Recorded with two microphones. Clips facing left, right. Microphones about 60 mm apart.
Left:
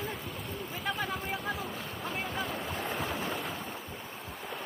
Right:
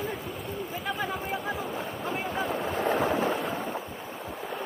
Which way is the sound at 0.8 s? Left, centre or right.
Centre.